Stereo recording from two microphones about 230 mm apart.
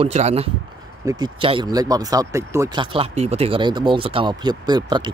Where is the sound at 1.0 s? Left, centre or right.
Centre.